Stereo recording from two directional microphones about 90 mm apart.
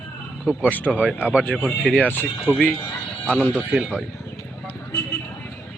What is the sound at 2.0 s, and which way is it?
Speech, 20° left (ahead or behind).